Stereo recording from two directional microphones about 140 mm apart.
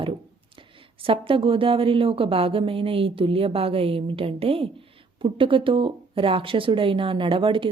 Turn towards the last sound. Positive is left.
turn(degrees=-35)  # may be behind; listen again after turning